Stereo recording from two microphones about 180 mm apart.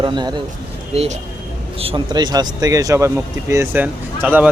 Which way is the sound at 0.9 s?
35° right (ahead or behind).